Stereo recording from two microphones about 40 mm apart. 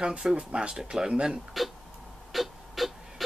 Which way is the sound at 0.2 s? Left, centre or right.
Centre.